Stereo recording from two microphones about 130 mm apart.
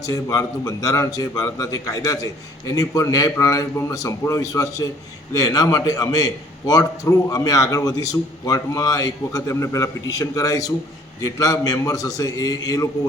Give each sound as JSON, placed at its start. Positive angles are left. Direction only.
{"t": 0.0, "sound": "a man's voice", "side_deg": 25}